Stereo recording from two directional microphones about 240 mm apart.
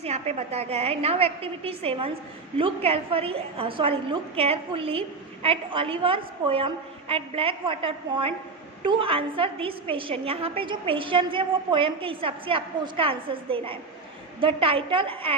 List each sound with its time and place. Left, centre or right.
0.0 s a woman's voice: right